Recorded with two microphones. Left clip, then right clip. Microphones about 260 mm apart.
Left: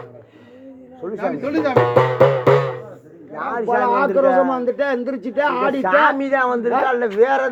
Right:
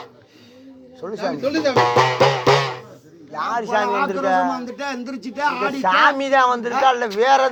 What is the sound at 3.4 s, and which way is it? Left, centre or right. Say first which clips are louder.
A man's voice: left 1 dB; right.